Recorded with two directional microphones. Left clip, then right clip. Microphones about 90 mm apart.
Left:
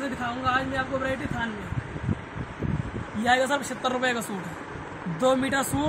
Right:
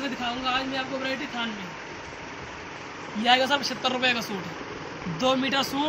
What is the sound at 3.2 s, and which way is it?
Speech, 40° left (ahead or behind).